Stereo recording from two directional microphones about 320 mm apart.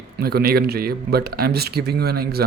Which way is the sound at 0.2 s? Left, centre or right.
Right.